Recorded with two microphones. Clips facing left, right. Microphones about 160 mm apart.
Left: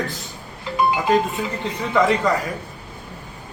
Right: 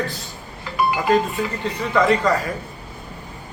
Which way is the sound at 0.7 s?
20° left (ahead or behind).